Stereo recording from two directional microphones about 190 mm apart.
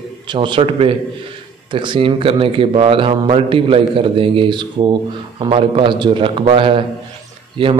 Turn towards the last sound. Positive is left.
turn(degrees=-30)  # may be behind; listen again after turning